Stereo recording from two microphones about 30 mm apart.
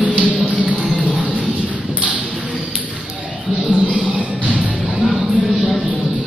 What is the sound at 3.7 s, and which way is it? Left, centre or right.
Music, left.